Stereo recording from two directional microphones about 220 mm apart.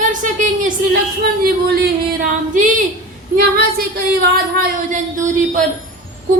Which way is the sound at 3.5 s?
40° right (ahead or behind).